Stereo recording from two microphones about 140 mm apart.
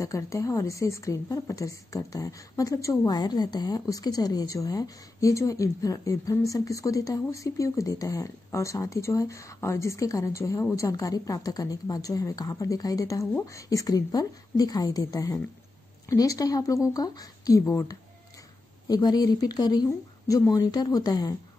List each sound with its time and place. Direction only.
0.0 s a woman's voice: 20° left (ahead or behind)